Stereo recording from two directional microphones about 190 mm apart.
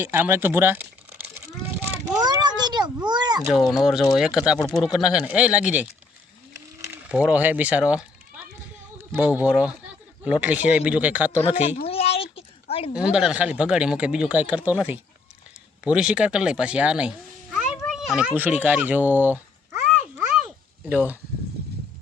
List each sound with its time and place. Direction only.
0.0 s speech: 10° right (ahead or behind)
2.1 s a child's voice: 20° right (ahead or behind)
3.7 s speech: centre (ahead or behind)
7.1 s speech: 5° right (ahead or behind)
9.1 s speech: 10° right (ahead or behind)
11.3 s speech: 35° left (ahead or behind)
11.9 s a sound: 30° left (ahead or behind)
12.9 s speech: 5° right (ahead or behind)
17.9 s a sound: 5° right (ahead or behind)